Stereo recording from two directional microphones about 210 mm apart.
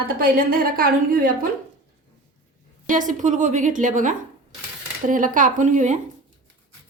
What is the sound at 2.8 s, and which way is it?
A woman's voice, 40° right (ahead or behind).